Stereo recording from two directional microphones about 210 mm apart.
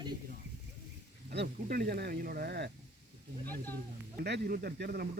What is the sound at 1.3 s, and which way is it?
Speech, 50° right (ahead or behind).